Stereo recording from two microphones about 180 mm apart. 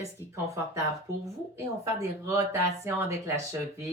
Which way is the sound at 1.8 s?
15° right (ahead or behind).